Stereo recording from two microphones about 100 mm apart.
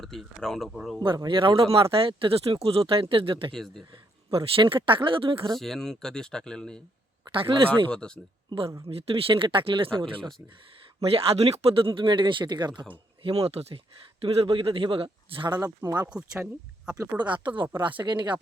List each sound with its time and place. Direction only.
0.0 s speech: centre (ahead or behind)
0.9 s speech: 45° right (ahead or behind); by 3.5 s 65° right (ahead or behind)
3.5 s speech: centre (ahead or behind)
4.3 s speech: 65° right (ahead or behind)
5.5 s speech: 5° left (ahead or behind)
7.3 s speech: 60° right (ahead or behind)
7.9 s speech: 10° left (ahead or behind)
8.4 s speech: 65° right (ahead or behind)
11.0 s speech: 75° right (ahead or behind); by 11.9 s 90° right
11.9 s speech: 55° right (ahead or behind)
13.2 s speech: 90° right; by 15.5 s 60° right (ahead or behind)
15.6 s speech: 40° right (ahead or behind)
16.0 s speech: 10° right (ahead or behind)
17.2 s speech: 50° right (ahead or behind)